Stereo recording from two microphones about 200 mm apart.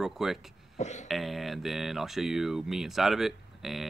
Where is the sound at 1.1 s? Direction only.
Centre (ahead or behind).